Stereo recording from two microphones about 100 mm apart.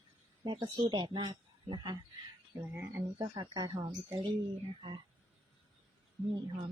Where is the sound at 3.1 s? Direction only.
50° right (ahead or behind).